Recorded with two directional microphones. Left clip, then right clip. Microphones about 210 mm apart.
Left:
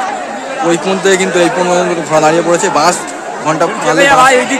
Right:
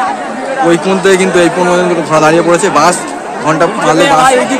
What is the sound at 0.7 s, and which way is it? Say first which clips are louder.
A man's voice: right 2 dB; centre (ahead or behind).